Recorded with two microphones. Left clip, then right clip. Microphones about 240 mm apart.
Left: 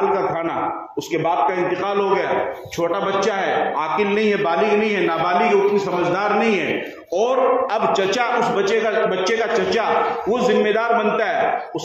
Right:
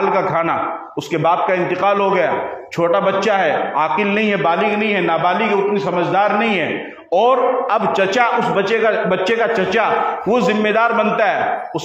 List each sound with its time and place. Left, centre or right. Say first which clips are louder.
1.1 s a man's voice: right 3 dB; right